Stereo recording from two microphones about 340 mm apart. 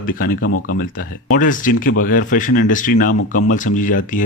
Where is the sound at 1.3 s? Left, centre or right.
Left.